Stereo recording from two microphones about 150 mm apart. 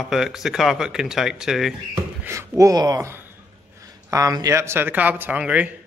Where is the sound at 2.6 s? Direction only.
25° right (ahead or behind).